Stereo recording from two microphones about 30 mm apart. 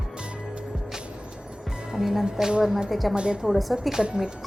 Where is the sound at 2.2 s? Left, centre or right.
Right.